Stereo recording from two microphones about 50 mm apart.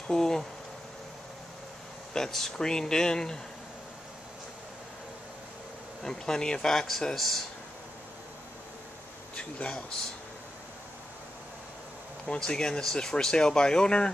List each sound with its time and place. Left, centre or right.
0.1 s speech: centre
2.1 s speech: centre
6.0 s speech: centre
9.3 s speech: left
12.3 s speech: centre